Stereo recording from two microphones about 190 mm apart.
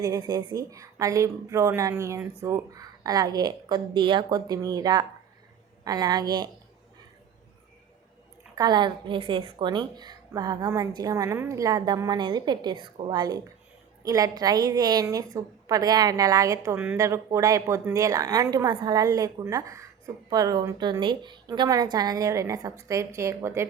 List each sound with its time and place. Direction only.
0.0 s a woman's voice: 20° right (ahead or behind)
8.5 s a woman's voice: 20° right (ahead or behind)